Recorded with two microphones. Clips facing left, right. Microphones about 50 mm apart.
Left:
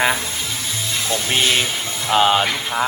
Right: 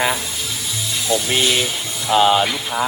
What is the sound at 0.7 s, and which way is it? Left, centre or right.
Music, left.